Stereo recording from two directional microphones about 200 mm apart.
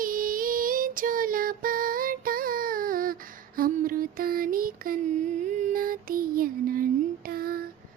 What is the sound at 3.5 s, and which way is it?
Mantra, 45° right (ahead or behind).